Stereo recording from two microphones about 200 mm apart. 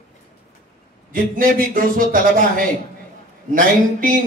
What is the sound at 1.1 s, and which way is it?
Speech, 45° right (ahead or behind).